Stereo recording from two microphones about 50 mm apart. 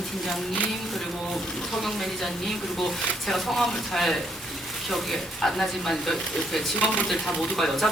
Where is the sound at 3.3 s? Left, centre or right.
Centre.